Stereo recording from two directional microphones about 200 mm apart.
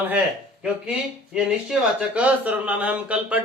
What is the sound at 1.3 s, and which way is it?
Speech, 5° right (ahead or behind).